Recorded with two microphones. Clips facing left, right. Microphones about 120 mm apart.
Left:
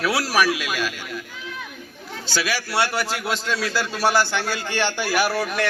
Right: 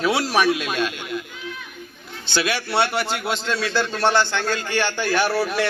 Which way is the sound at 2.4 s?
5° left (ahead or behind).